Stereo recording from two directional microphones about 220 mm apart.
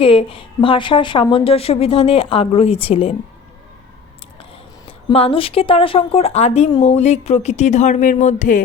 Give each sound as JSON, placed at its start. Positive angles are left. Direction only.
{"t": 0.0, "sound": "speech", "side_deg": 25}
{"t": 4.9, "sound": "speech", "side_deg": 25}